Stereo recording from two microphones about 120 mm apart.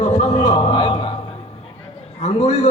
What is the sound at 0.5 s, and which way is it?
Speech, 40° left (ahead or behind).